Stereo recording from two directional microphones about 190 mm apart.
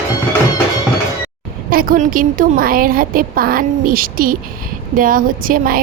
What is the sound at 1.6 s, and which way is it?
A woman's voice, 50° right (ahead or behind).